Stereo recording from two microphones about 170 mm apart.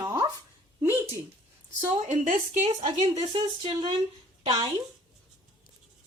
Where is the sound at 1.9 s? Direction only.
45° right (ahead or behind).